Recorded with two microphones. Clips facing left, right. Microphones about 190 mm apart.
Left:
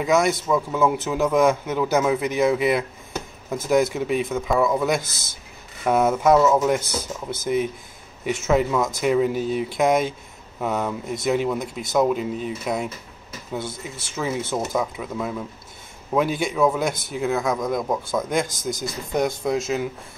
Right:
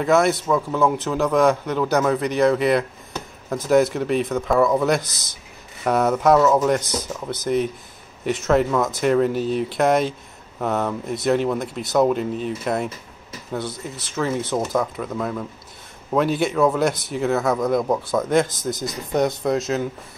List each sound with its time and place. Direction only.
0.0 s a man's voice: centre (ahead or behind)
6.8 s speech: 30° left (ahead or behind)
7.4 s a man's voice: 5° left (ahead or behind)